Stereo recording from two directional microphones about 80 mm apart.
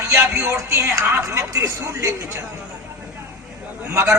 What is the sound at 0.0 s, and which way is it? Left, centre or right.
Speech, right.